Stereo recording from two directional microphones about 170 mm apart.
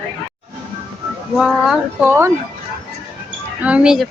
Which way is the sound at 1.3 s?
5° right (ahead or behind).